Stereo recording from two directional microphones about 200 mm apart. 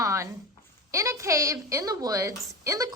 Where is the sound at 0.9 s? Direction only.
15° right (ahead or behind).